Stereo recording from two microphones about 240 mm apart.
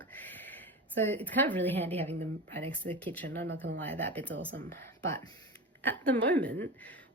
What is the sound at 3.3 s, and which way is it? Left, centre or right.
Speech, right.